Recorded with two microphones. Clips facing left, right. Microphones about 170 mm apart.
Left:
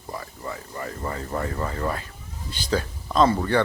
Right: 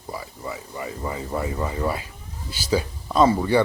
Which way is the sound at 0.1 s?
5° right (ahead or behind).